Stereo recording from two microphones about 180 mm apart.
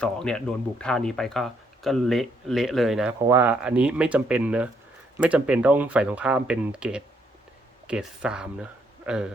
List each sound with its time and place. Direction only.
0.0 s a man's voice: 5° left (ahead or behind)